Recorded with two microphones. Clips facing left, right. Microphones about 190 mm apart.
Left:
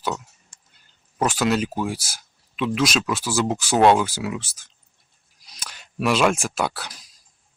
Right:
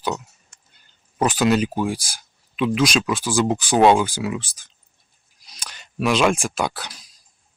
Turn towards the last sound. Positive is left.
turn(degrees=5)  # may be behind; listen again after turning